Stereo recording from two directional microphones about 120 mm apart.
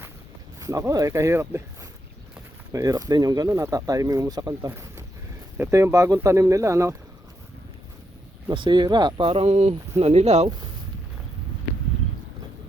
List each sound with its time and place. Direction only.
0.6 s speech: 25° right (ahead or behind)
8.4 s speech: 40° right (ahead or behind); by 10.5 s 65° right (ahead or behind)